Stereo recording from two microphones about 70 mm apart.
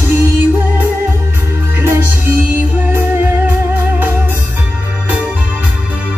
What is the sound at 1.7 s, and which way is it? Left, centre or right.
Music, right.